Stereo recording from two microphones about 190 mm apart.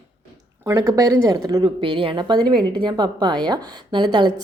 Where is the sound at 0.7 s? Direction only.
20° right (ahead or behind).